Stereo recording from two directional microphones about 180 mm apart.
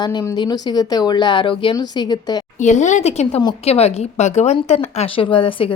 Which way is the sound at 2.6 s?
40° left (ahead or behind).